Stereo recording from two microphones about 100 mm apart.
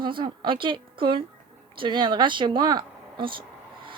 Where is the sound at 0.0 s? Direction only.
55° right (ahead or behind).